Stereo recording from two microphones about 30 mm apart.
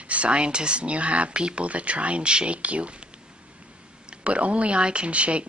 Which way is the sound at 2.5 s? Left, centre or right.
Right.